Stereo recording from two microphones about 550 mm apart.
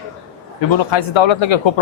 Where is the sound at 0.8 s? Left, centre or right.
Left.